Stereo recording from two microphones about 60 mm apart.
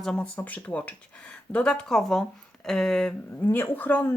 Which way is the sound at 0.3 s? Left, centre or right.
Left.